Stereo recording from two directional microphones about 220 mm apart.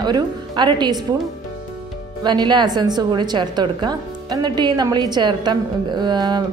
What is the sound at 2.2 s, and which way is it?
A woman's voice, 20° right (ahead or behind).